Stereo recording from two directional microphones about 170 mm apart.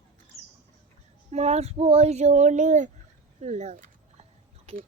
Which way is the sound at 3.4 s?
40° right (ahead or behind).